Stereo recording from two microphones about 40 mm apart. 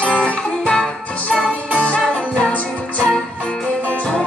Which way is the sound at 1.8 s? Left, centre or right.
Left.